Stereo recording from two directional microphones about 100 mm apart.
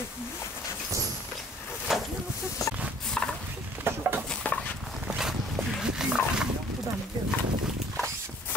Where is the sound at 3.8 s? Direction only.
20° right (ahead or behind).